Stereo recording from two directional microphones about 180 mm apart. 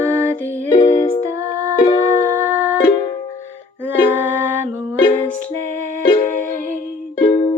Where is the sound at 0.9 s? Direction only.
35° left (ahead or behind).